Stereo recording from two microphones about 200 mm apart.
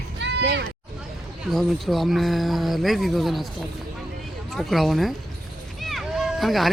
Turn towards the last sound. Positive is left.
turn(degrees=0)  # may be behind; listen again after turning